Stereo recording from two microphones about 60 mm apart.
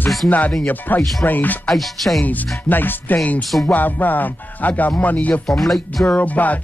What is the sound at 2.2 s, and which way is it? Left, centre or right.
Speech, left.